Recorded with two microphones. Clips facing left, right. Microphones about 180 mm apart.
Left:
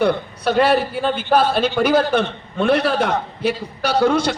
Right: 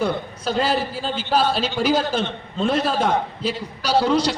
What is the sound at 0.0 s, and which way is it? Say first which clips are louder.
A man's voice: left 5 dB; 65° left (ahead or behind).